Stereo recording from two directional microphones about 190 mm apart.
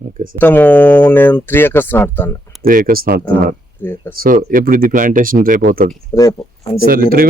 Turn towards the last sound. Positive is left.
turn(degrees=-50)  # may be behind; listen again after turning